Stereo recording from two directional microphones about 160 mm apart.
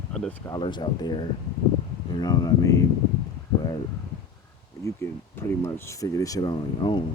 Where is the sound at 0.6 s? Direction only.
30° left (ahead or behind).